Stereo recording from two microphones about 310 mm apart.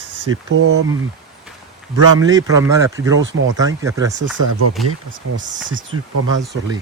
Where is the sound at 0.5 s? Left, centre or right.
Right.